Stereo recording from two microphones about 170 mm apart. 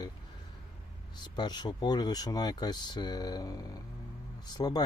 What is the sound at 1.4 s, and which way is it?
Speech, 25° left (ahead or behind).